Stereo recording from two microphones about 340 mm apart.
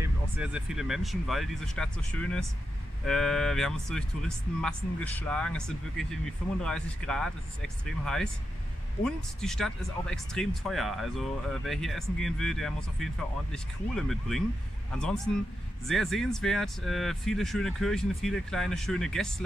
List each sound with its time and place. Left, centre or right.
0.0 s speech: centre